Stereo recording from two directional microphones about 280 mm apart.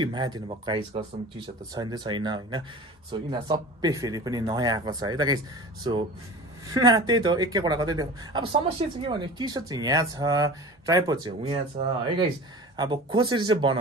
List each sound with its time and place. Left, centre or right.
0.0 s speech: centre
6.7 s speech: centre